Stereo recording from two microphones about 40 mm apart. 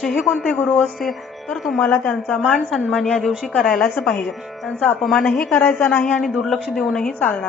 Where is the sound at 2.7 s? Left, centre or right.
Centre.